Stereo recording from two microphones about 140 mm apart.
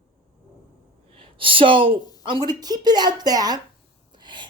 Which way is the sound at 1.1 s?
40° right (ahead or behind).